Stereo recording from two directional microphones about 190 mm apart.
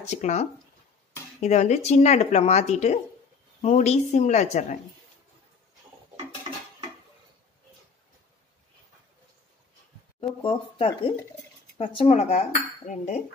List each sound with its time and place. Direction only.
0.1 s speech: 40° left (ahead or behind)
10.2 s speech: 30° left (ahead or behind)